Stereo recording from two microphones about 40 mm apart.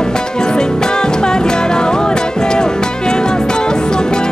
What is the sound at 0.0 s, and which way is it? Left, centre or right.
Music, centre.